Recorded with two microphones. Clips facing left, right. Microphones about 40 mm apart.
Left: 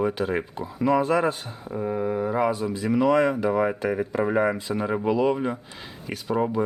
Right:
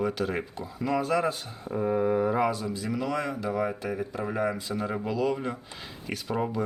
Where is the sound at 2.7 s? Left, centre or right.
Left.